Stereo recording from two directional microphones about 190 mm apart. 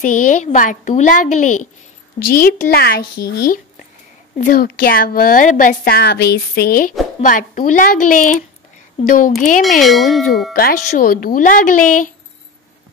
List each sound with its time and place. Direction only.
0.0 s a woman's voice: 45° left (ahead or behind)
9.6 s a sound: centre (ahead or behind)
10.5 s a woman's voice: 50° left (ahead or behind)